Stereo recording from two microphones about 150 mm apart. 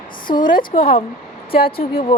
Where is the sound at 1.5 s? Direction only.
90° left.